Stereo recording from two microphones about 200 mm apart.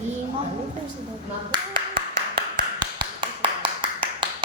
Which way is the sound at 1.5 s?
25° right (ahead or behind).